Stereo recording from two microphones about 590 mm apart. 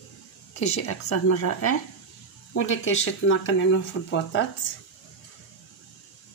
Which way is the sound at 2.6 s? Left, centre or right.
Centre.